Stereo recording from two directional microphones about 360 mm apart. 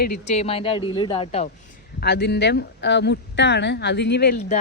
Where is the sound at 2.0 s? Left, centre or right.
Left.